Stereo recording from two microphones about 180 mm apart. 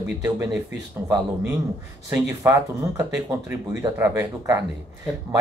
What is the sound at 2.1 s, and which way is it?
Speech, 15° right (ahead or behind).